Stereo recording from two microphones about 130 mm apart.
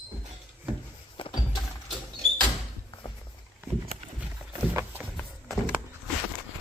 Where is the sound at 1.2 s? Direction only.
40° left (ahead or behind).